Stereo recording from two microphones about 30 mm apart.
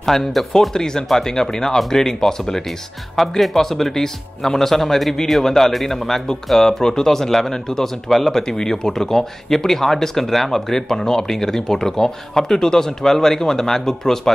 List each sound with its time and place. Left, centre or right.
0.0 s speech: centre
0.7 s speech: centre
3.2 s speech: centre